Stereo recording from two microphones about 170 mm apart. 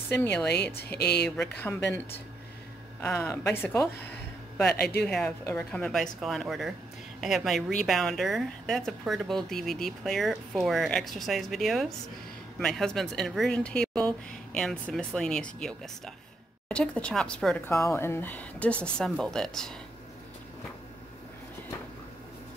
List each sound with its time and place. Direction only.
0.1 s speech: 10° left (ahead or behind)
0.9 s speech: 75° left (ahead or behind)
3.0 s speech: 15° left (ahead or behind)
5.0 s speech: 5° left (ahead or behind)
17.6 s speech: 15° left (ahead or behind)